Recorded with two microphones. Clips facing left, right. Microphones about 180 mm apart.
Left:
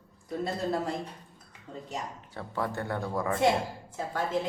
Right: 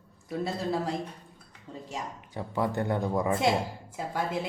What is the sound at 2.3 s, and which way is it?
A woman's voice, 15° right (ahead or behind).